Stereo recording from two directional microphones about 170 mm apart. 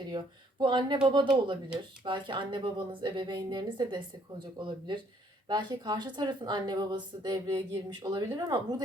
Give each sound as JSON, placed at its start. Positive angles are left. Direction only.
{"t": 0.1, "sound": "a woman's voice", "side_deg": -25}
{"t": 5.5, "sound": "a woman's voice", "side_deg": -25}